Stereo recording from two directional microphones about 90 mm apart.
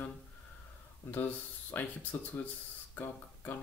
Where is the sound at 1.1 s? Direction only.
20° left (ahead or behind).